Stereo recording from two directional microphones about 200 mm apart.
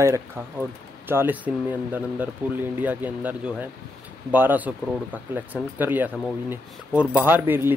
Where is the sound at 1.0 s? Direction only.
10° right (ahead or behind).